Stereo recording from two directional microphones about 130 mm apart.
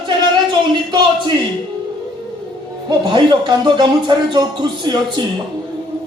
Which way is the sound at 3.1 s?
35° right (ahead or behind).